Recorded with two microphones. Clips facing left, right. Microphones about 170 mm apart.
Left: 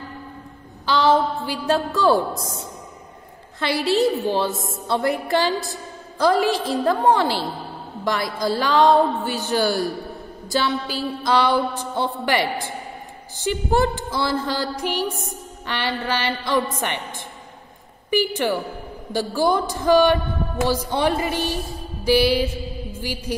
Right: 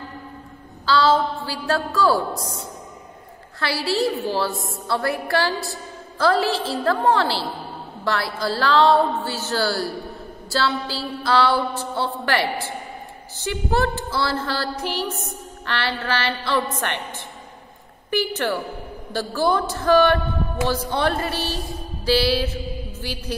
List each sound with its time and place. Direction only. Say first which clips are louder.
0.8 s a woman's voice: even; 20° left (ahead or behind)
18.1 s a woman's voice: left 2 dB; 15° left (ahead or behind)
22.0 s mantra: left 2 dB; 15° left (ahead or behind)